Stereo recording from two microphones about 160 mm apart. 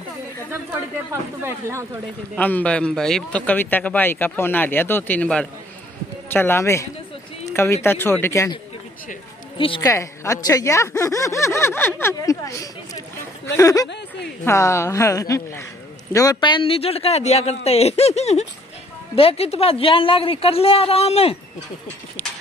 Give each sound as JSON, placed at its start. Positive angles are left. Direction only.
{"t": 1.4, "sound": "speech", "side_deg": -15}
{"t": 2.3, "sound": "speech", "side_deg": 10}
{"t": 9.8, "sound": "a man's voice", "side_deg": 20}